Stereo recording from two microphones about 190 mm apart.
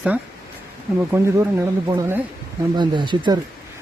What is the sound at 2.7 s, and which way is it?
Speech, 25° right (ahead or behind).